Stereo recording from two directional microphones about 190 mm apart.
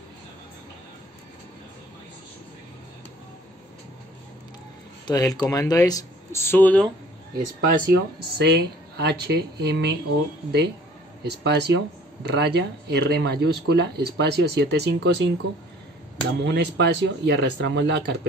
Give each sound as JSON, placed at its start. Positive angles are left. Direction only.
{"t": 5.0, "sound": "speech", "side_deg": 20}
{"t": 7.6, "sound": "speech", "side_deg": -55}
{"t": 11.2, "sound": "speech", "side_deg": -60}